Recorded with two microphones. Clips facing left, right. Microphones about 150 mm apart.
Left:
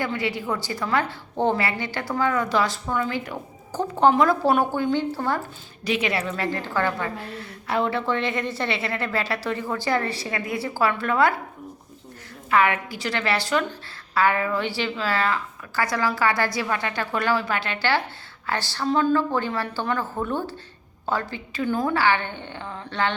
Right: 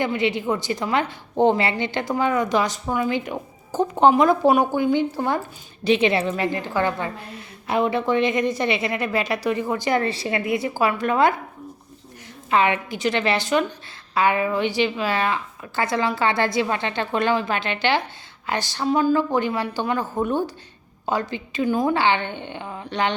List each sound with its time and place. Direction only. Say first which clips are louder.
0.0 s a woman's voice: right 4 dB; 20° right (ahead or behind)
5.8 s a woman's voice: right 6 dB; 25° right (ahead or behind)
12.5 s a woman's voice: right 1 dB; 20° right (ahead or behind)